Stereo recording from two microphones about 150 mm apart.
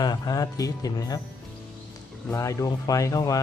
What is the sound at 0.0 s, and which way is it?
Speech, 25° left (ahead or behind).